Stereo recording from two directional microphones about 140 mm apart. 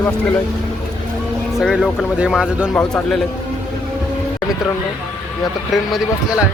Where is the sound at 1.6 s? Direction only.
Centre (ahead or behind).